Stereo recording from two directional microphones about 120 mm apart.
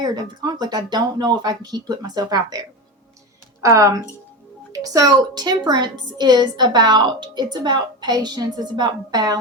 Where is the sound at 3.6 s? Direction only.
25° right (ahead or behind).